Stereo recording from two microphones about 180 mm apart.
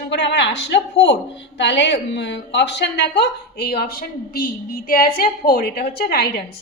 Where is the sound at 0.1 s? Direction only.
75° left (ahead or behind).